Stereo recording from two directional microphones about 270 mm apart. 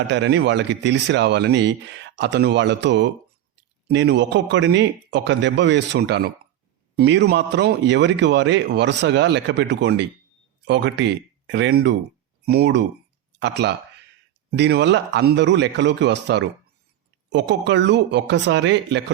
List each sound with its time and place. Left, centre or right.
0.1 s a man's voice: right